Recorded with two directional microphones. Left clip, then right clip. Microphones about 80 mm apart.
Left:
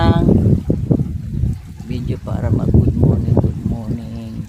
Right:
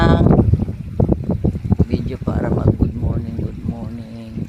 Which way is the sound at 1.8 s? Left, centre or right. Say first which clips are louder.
Right 3 dB; centre.